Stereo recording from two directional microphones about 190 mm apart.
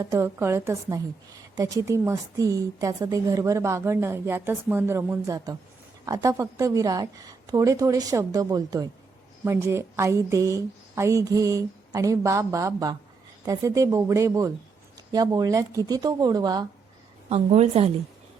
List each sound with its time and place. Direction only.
0.0 s a woman's voice: 15° right (ahead or behind)
17.2 s a woman's voice: 35° right (ahead or behind)